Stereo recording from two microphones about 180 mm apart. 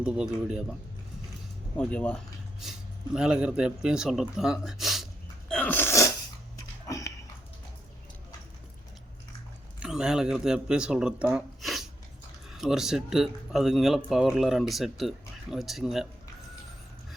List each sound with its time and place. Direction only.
0.0 s speech: 5° right (ahead or behind)
1.7 s speech: 5° left (ahead or behind)
5.5 s sneeze: 10° left (ahead or behind)
6.8 s dog: 15° left (ahead or behind)
9.8 s speech: 5° right (ahead or behind)